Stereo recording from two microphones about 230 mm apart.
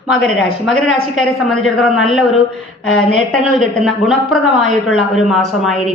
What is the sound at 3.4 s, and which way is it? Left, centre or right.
Speech, centre.